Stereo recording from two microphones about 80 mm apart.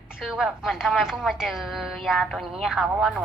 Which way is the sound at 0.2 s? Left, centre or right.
Centre.